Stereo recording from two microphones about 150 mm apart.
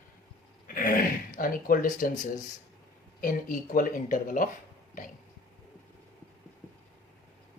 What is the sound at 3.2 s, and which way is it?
Speech, 65° left (ahead or behind).